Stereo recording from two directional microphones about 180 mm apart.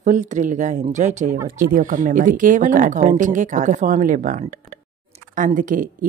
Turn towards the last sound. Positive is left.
turn(degrees=-50)  # may be behind; listen again after turning